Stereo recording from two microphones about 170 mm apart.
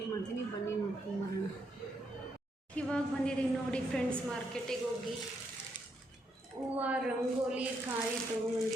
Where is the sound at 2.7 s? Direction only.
5° left (ahead or behind).